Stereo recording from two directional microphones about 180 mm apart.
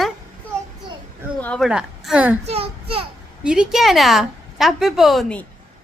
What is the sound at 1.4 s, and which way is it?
Speech, 5° left (ahead or behind).